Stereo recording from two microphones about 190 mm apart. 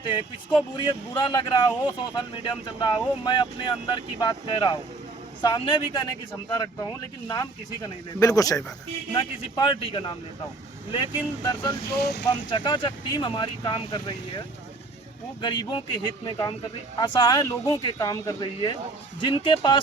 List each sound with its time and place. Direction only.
0.8 s speech: 25° left (ahead or behind)
11.9 s speech: 55° left (ahead or behind)
12.3 s speech: 25° left (ahead or behind)